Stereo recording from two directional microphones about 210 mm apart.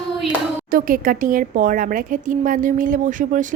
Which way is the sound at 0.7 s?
40° right (ahead or behind).